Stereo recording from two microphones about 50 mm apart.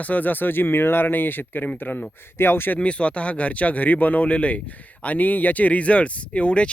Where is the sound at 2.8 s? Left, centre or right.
Left.